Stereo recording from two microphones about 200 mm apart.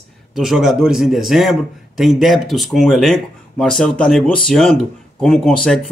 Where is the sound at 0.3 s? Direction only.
Centre (ahead or behind).